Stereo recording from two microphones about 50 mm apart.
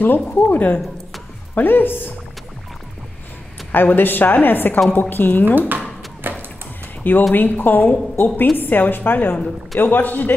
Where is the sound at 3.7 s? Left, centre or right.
Left.